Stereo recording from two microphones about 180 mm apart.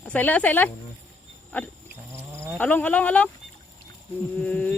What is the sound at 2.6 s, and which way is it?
Speech, 10° left (ahead or behind).